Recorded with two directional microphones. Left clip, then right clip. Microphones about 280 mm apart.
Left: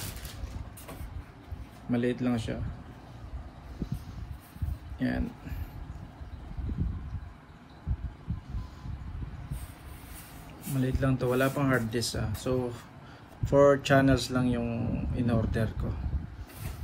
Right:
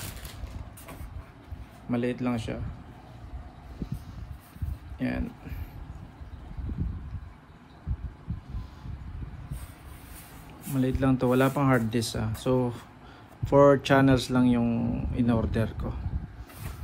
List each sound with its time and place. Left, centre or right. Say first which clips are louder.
1.9 s speech: even; right
4.9 s speech: even; right
10.7 s speech: right 4 dB; right